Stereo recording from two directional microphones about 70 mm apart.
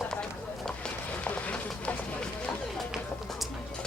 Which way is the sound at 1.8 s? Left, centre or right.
Centre.